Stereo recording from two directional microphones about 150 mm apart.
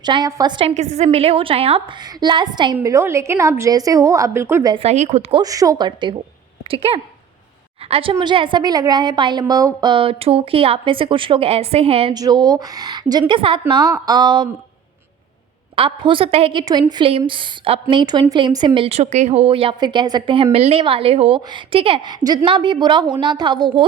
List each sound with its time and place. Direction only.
0.0 s a woman's voice: 30° right (ahead or behind)
0.7 s a woman's voice: 50° right (ahead or behind); by 2.7 s 30° right (ahead or behind)
2.7 s a woman's voice: 15° right (ahead or behind)
4.7 s a woman's voice: 45° right (ahead or behind)
5.3 s a woman's voice: 25° right (ahead or behind); by 8.1 s 40° right (ahead or behind)
8.1 s a woman's voice: 30° right (ahead or behind)
12.1 s a woman's voice: 25° right (ahead or behind)
15.7 s a woman's voice: 35° right (ahead or behind)